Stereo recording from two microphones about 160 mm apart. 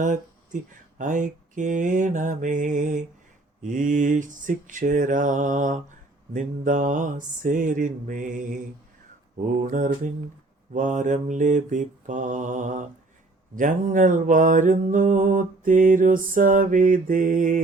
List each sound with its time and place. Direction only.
0.0 s speech: 55° right (ahead or behind)
9.5 s mantra: 55° right (ahead or behind)
10.8 s speech: 50° right (ahead or behind)
13.6 s mantra: 55° right (ahead or behind)